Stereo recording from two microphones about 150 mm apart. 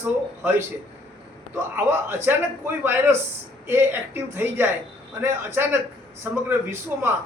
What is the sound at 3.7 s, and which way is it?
A man's voice, 15° right (ahead or behind).